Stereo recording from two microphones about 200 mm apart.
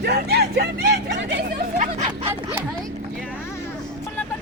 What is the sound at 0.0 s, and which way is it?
Vehicle, 55° right (ahead or behind).